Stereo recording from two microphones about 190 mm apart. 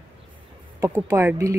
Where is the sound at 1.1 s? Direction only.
15° right (ahead or behind).